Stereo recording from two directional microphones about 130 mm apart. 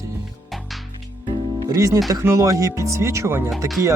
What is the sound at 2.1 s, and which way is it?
Speech, 25° right (ahead or behind).